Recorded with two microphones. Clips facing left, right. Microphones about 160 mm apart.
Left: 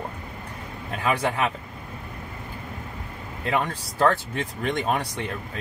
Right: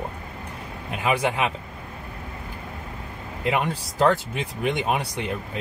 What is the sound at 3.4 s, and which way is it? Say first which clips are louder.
Speech: right 1 dB; 15° right (ahead or behind).